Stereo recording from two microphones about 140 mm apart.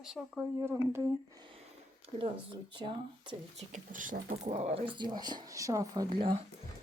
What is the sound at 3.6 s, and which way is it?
Speech, 65° right (ahead or behind).